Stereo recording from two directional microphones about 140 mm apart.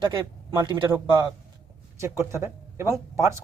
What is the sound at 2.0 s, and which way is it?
Speech, 20° right (ahead or behind).